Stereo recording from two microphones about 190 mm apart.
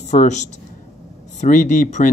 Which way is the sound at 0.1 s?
40° left (ahead or behind).